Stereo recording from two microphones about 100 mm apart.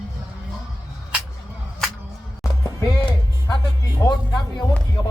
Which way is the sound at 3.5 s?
40° left (ahead or behind).